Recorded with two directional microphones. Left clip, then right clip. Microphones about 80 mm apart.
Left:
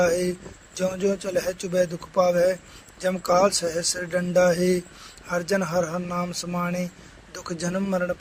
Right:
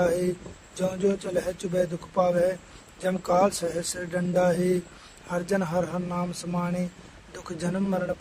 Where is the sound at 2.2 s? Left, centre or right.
Left.